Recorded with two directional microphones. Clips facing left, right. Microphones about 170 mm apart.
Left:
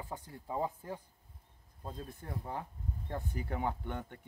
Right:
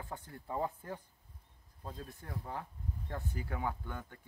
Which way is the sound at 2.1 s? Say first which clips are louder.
Left 2 dB; 15° left (ahead or behind).